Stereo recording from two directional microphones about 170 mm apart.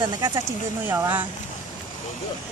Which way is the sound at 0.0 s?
20° right (ahead or behind).